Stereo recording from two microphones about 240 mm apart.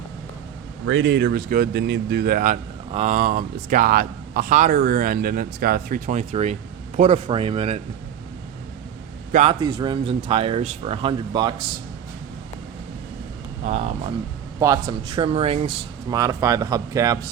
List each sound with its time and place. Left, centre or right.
0.9 s speech: right
9.3 s speech: right
13.7 s speech: right